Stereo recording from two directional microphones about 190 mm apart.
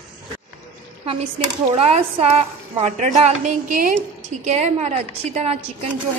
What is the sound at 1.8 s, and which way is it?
A woman's voice, 35° right (ahead or behind).